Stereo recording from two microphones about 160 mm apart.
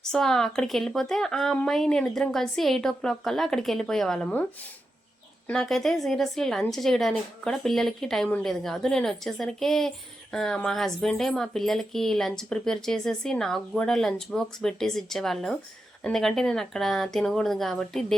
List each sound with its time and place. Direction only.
0.0 s speech: 5° left (ahead or behind)
5.5 s speech: centre (ahead or behind)